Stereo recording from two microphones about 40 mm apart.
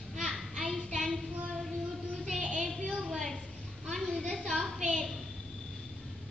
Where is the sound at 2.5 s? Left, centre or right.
Centre.